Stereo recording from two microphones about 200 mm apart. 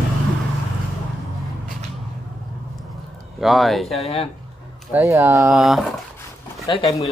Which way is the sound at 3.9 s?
30° left (ahead or behind).